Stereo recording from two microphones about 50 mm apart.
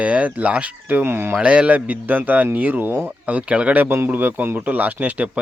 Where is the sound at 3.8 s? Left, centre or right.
Right.